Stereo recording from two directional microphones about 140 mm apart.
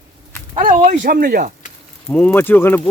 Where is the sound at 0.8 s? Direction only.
60° right (ahead or behind); by 1.5 s 80° right.